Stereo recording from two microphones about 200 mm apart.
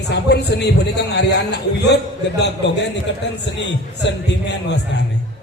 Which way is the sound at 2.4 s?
60° left (ahead or behind).